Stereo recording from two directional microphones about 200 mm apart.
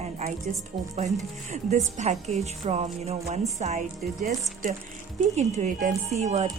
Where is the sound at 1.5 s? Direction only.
35° right (ahead or behind).